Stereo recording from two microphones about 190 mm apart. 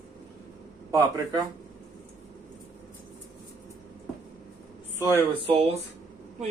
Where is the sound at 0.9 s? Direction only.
15° right (ahead or behind).